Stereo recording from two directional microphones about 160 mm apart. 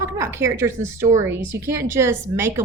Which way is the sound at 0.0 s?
15° right (ahead or behind).